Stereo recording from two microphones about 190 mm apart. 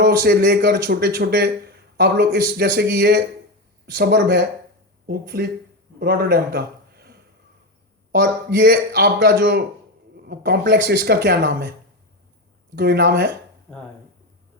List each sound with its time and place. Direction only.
0.0 s a man's voice: 55° right (ahead or behind)
8.2 s speech: 65° right (ahead or behind)
12.7 s speech: 60° right (ahead or behind)